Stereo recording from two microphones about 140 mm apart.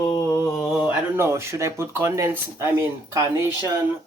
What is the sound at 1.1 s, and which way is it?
Speech, 20° right (ahead or behind).